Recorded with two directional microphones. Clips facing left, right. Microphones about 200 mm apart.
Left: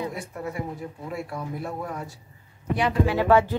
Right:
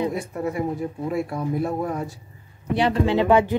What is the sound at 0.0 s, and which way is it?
A woman's voice, 20° right (ahead or behind).